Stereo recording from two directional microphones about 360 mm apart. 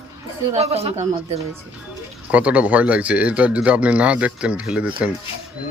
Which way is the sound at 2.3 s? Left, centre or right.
Centre.